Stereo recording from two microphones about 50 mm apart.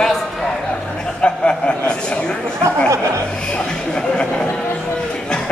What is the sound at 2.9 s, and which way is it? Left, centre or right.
Speech, right.